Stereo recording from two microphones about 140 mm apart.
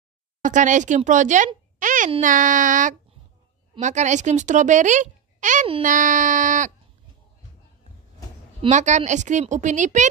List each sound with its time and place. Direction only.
0.4 s speech: 65° right (ahead or behind)
1.8 s a sound: 65° right (ahead or behind)
2.2 s speech: 70° right (ahead or behind)
8.6 s speech: 60° right (ahead or behind)